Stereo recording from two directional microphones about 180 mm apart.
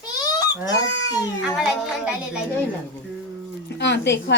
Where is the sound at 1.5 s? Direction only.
5° right (ahead or behind).